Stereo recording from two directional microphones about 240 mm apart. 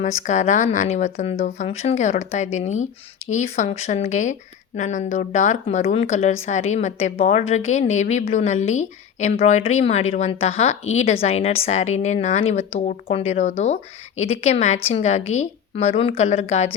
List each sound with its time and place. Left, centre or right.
0.0 s a woman's voice: left